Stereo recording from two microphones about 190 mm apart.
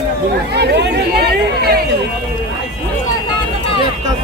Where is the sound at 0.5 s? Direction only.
60° right (ahead or behind).